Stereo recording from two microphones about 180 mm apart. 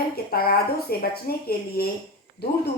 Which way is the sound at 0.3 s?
55° left (ahead or behind).